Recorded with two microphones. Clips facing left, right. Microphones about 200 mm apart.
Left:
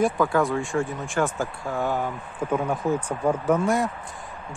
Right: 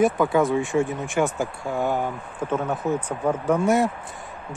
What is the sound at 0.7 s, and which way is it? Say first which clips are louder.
Speech: right 3 dB; 20° right (ahead or behind).